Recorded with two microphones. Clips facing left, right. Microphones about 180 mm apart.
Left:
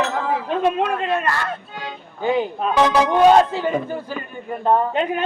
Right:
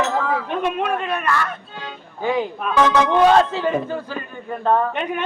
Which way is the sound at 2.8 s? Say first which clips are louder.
Even; 10° left (ahead or behind).